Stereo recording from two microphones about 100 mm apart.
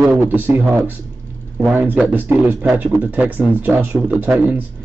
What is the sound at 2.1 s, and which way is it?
A man's voice, 20° right (ahead or behind).